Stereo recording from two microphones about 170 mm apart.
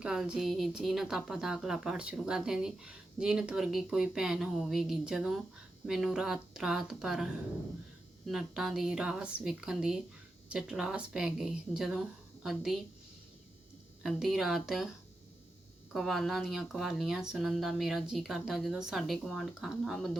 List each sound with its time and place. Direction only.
0.0 s speech: 5° right (ahead or behind)
8.3 s speech: centre (ahead or behind)
14.0 s speech: centre (ahead or behind)